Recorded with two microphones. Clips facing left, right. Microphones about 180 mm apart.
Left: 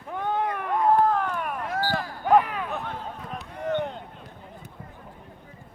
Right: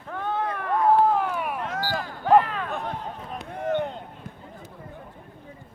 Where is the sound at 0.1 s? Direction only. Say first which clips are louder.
Left 1 dB; 15° left (ahead or behind).